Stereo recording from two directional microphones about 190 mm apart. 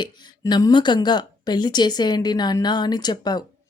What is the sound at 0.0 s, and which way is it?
Speech, 25° left (ahead or behind).